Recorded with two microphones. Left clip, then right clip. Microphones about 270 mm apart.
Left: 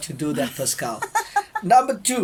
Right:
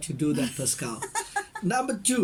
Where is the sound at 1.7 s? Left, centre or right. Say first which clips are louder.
Left 13 dB; centre.